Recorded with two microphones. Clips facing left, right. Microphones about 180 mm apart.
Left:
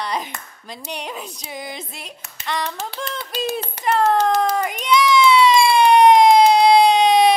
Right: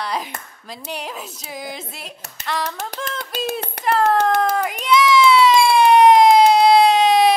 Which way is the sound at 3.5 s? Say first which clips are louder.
Even; 65° right (ahead or behind).